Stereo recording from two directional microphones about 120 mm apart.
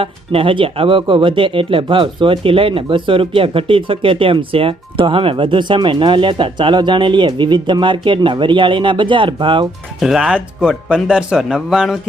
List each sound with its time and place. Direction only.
0.0 s speech: 50° right (ahead or behind)
10.0 s speech: 5° right (ahead or behind)